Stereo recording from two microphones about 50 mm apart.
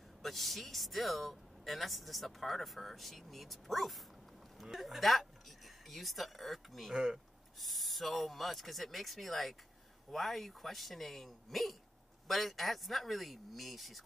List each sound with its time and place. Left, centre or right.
0.2 s speech: centre